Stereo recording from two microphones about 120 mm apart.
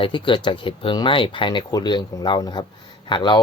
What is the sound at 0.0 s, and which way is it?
Speech, 45° left (ahead or behind).